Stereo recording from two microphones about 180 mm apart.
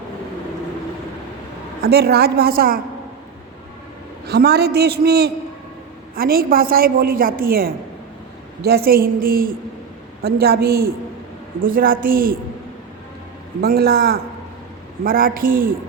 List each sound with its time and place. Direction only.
1.8 s a man's voice: 65° right (ahead or behind)
4.3 s a man's voice: 65° right (ahead or behind)
13.6 s a man's voice: 60° right (ahead or behind)